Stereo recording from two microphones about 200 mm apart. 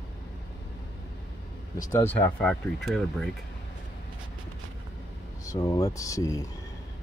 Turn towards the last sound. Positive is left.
turn(degrees=15)  # may be behind; listen again after turning